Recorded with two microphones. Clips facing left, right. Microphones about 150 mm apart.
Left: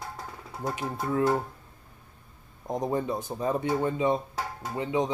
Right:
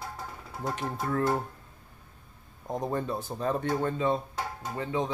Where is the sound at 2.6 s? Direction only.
15° left (ahead or behind).